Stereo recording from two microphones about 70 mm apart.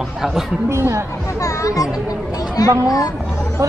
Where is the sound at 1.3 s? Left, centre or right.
Left.